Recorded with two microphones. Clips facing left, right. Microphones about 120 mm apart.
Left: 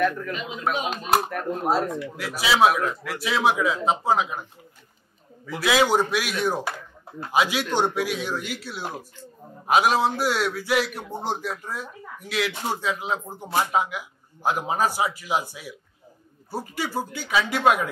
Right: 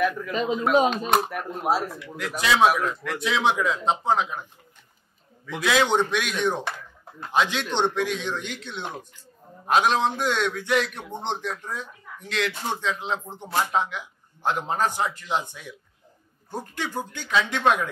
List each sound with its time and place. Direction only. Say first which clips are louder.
0.3 s a man's voice: right 7 dB; 35° right (ahead or behind)
0.8 s a man's voice: right 1 dB; 5° left (ahead or behind)